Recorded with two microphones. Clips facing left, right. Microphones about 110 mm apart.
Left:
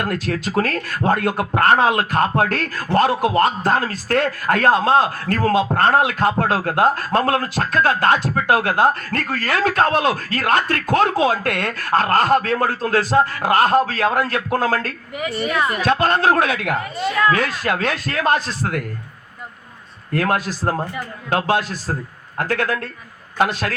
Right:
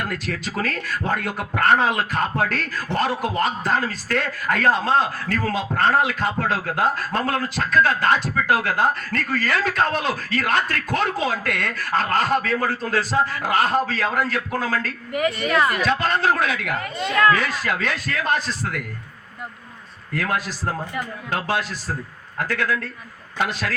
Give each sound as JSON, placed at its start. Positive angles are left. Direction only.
{"t": 0.0, "sound": "a man's voice", "side_deg": 50}
{"t": 17.0, "sound": "speech", "side_deg": 5}
{"t": 17.3, "sound": "a man's voice", "side_deg": 50}
{"t": 20.1, "sound": "a man's voice", "side_deg": 55}